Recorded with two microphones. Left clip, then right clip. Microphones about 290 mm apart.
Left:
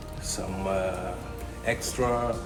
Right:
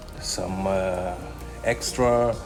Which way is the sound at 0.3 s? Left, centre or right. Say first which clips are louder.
Right 5 dB; right.